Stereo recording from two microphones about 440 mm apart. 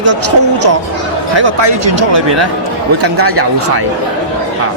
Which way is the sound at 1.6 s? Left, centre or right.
Right.